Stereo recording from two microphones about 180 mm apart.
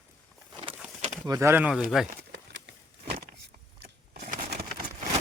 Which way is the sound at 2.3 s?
75° right (ahead or behind).